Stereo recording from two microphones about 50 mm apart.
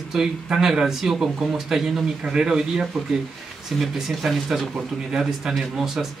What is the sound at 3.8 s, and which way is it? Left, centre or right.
Speech, centre.